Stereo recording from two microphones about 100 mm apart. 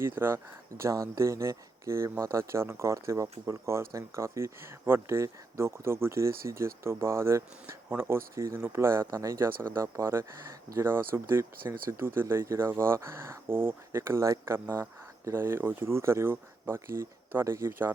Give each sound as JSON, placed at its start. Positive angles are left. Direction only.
{"t": 0.0, "sound": "speech", "side_deg": -25}